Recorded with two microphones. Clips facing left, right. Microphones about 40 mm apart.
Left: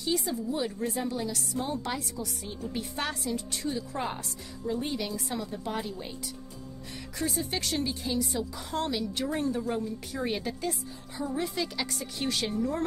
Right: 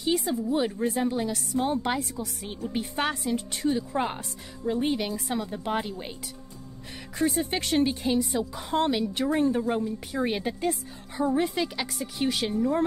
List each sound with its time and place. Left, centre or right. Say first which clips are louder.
0.2 s a woman's voice: right 5 dB; right
7.2 s a woman's voice: right 6 dB; right
10.6 s a woman's voice: right 5 dB; right
11.8 s speech: right 4 dB; centre